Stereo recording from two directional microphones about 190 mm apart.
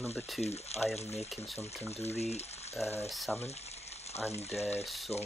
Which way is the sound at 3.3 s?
35° left (ahead or behind).